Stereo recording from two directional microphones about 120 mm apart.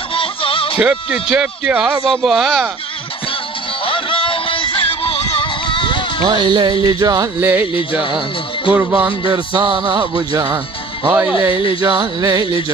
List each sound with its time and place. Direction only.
0.1 s music: 50° left (ahead or behind)
0.7 s speech: 10° right (ahead or behind)
3.8 s music: 45° left (ahead or behind)
6.2 s speech: 40° right (ahead or behind)
7.3 s speech: 20° right (ahead or behind)
8.7 s speech: 10° right (ahead or behind)
9.3 s speech: 40° right (ahead or behind)
11.1 s speech: 15° right (ahead or behind)
11.8 s speech: 35° right (ahead or behind)